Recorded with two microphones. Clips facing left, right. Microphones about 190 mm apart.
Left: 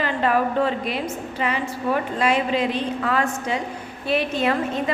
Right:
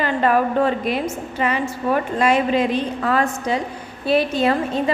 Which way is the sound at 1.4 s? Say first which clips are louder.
Right 3 dB; 50° right (ahead or behind).